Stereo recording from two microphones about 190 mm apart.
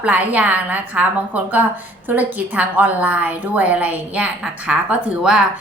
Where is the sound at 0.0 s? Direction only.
10° right (ahead or behind).